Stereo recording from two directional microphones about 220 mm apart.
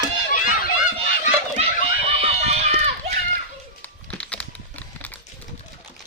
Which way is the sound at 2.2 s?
30° right (ahead or behind).